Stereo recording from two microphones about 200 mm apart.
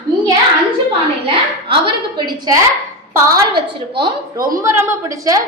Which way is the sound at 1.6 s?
25° right (ahead or behind).